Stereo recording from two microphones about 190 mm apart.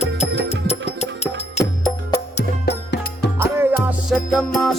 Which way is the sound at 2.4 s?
60° left (ahead or behind).